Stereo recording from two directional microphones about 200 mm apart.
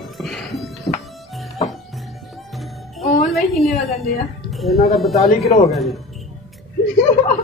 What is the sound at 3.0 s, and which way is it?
Music, 30° left (ahead or behind).